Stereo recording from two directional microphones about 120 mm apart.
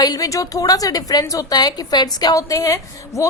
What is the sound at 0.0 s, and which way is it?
A woman's voice, 30° left (ahead or behind).